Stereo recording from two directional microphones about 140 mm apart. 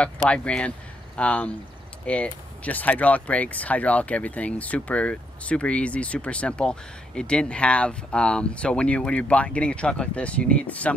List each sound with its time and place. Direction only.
0.0 s speech: 10° left (ahead or behind)